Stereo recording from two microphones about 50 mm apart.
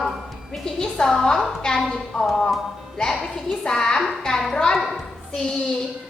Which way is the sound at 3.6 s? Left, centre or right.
Centre.